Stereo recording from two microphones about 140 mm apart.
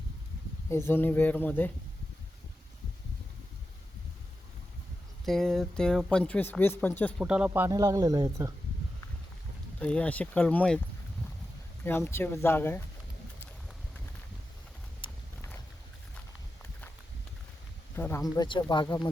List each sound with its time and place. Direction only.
0.7 s speech: 15° left (ahead or behind)
5.2 s speech: centre (ahead or behind)
7.2 s speech: 5° right (ahead or behind)
7.7 s speech: 25° right (ahead or behind)
9.8 s speech: 10° left (ahead or behind)
11.9 s speech: 15° left (ahead or behind)
15.0 s clip-clop: 40° left (ahead or behind)
17.9 s speech: 15° left (ahead or behind)
18.3 s speech: 35° left (ahead or behind)